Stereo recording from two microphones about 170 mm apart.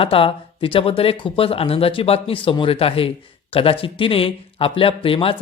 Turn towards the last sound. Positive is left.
turn(degrees=30)  # may be behind; listen again after turning